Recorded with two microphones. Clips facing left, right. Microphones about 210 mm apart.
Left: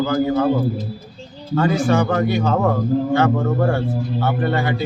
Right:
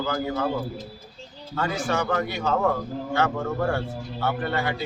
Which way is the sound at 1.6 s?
35° left (ahead or behind).